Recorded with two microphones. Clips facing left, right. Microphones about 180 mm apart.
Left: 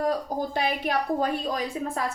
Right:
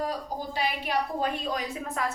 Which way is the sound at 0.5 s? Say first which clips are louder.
Left 1 dB; 50° left (ahead or behind).